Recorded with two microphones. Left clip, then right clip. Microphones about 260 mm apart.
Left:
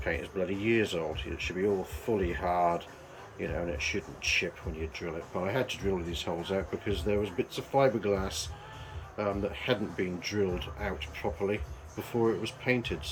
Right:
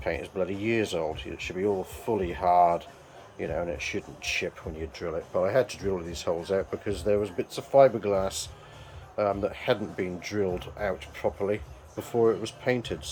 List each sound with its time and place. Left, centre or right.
0.0 s speech: centre